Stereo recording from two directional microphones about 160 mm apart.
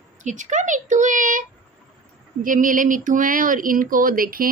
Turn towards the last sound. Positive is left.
turn(degrees=-60)  # may be behind; listen again after turning